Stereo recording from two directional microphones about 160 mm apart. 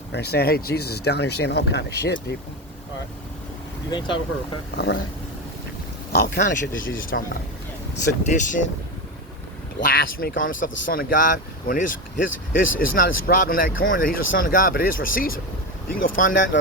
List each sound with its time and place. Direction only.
0.1 s speech: 90° left
3.9 s speech: 30° left (ahead or behind)
6.1 s speech: 75° left (ahead or behind)
6.4 s speech: 60° left (ahead or behind)
9.8 s speech: 65° left (ahead or behind)